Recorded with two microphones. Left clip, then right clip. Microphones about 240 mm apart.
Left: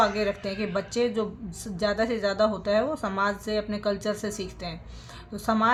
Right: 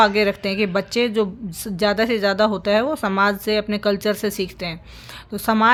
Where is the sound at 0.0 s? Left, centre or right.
Right.